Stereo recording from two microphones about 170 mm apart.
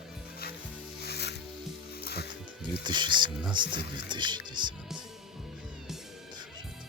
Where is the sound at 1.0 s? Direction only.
75° left (ahead or behind).